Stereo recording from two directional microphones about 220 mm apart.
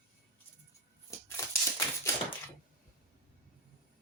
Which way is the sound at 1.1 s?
15° left (ahead or behind).